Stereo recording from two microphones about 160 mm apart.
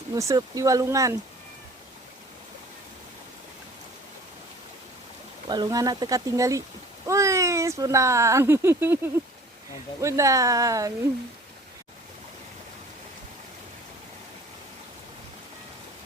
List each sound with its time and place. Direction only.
0.1 s speech: 20° right (ahead or behind)
5.5 s speech: 25° right (ahead or behind)
10.0 s speech: 20° right (ahead or behind)